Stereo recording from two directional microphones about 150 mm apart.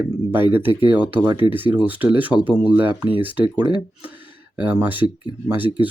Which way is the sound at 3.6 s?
30° right (ahead or behind).